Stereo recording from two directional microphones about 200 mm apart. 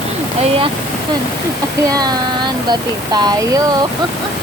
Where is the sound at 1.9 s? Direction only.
20° right (ahead or behind).